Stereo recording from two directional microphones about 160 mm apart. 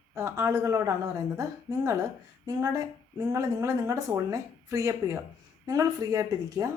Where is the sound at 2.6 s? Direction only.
20° right (ahead or behind).